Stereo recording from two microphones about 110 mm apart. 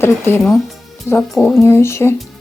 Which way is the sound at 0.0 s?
20° left (ahead or behind).